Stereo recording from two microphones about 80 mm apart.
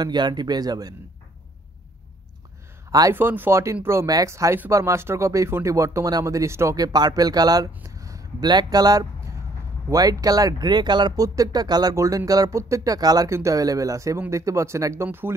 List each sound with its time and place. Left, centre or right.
0.0 s speech: right
3.1 s speech: right
4.1 s speech: right
6.8 s speech: right
7.8 s a sound: right
8.5 s speech: right
11.2 s speech: right
11.9 s speech: right
13.3 s speech: right
15.0 s speech: right